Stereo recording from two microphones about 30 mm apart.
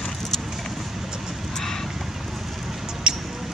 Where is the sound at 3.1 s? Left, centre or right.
Right.